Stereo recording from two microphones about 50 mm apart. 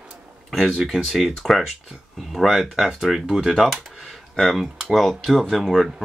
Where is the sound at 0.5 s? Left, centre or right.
Centre.